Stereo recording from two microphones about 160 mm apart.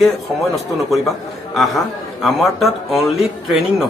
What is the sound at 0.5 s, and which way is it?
Speech, centre (ahead or behind).